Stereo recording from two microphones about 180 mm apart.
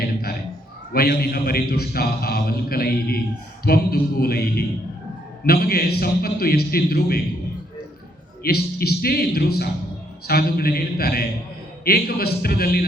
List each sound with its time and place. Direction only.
0.9 s a man's voice: 60° left (ahead or behind)
8.4 s a man's voice: 60° left (ahead or behind)